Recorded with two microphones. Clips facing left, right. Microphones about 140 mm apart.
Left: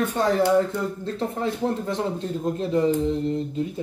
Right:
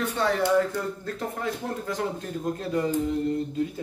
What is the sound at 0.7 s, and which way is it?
Speech, 25° left (ahead or behind).